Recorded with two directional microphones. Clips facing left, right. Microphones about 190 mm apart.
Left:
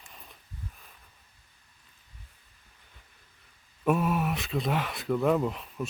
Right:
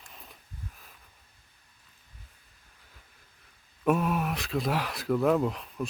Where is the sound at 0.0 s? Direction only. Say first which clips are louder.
Right 1 dB; centre (ahead or behind).